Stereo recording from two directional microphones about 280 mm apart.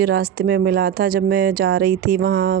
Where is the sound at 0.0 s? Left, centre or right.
Right.